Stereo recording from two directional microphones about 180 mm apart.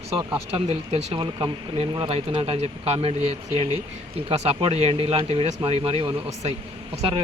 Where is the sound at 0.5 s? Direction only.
35° right (ahead or behind).